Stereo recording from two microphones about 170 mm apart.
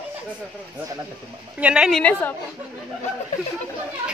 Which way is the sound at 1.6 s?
5° right (ahead or behind).